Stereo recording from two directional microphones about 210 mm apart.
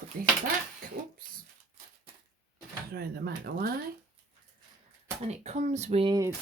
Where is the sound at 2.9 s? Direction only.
50° right (ahead or behind).